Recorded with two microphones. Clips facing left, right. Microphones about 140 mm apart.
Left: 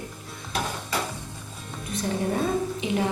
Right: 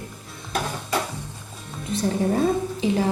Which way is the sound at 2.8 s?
30° right (ahead or behind).